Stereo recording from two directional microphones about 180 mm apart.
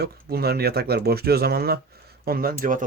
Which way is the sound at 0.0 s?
60° right (ahead or behind).